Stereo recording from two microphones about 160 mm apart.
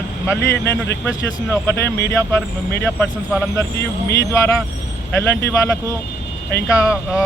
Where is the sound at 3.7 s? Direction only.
90° left.